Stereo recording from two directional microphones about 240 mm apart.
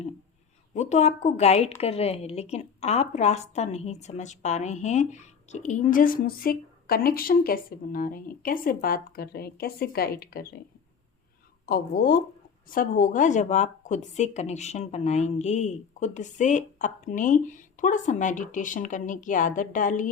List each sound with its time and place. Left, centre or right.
0.7 s a woman's voice: left
11.6 s a woman's voice: left